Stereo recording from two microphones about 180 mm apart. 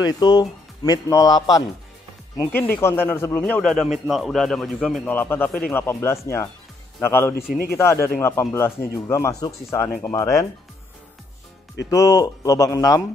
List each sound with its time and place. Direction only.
0.0 s speech: 25° left (ahead or behind)
7.3 s speech: 60° left (ahead or behind)
7.7 s speech: 15° left (ahead or behind)
11.9 s speech: 20° left (ahead or behind)